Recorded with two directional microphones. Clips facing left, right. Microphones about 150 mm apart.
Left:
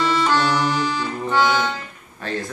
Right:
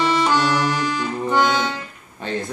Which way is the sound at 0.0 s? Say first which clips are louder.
Right 1 dB; 15° right (ahead or behind).